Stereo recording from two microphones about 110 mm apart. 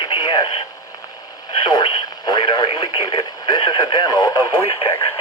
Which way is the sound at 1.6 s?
40° left (ahead or behind).